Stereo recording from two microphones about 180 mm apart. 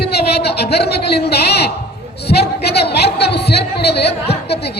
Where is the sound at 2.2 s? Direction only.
65° left (ahead or behind).